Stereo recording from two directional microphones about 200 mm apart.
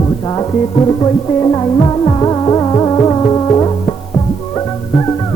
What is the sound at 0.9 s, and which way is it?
Music, 20° left (ahead or behind).